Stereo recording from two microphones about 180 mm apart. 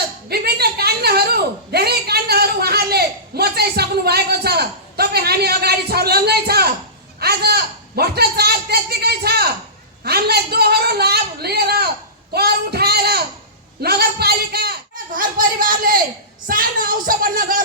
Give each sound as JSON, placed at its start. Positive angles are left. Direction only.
{"t": 0.3, "sound": "a woman's voice", "side_deg": -60}